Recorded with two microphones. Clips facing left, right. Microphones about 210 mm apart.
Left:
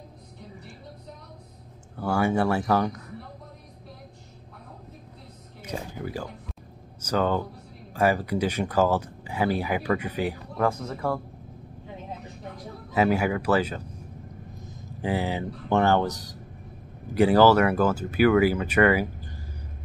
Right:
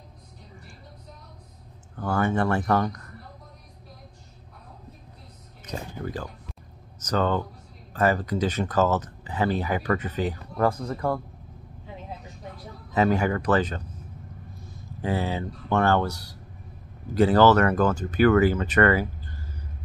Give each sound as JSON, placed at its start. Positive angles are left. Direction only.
{"t": 2.0, "sound": "speech", "side_deg": 10}
{"t": 5.7, "sound": "speech", "side_deg": 10}
{"t": 10.6, "sound": "speech", "side_deg": 0}
{"t": 12.9, "sound": "speech", "side_deg": 10}